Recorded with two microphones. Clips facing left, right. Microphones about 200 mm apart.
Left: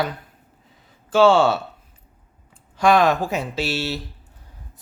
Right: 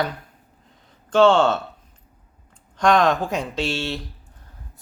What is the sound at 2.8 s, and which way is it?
Speech, 5° left (ahead or behind).